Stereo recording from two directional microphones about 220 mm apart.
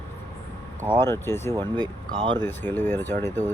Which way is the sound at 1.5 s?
20° right (ahead or behind).